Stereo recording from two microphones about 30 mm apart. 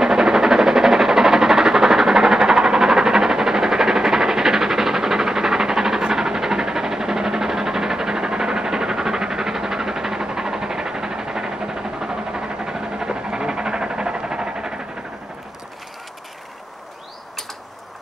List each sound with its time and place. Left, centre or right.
0.0 s train: centre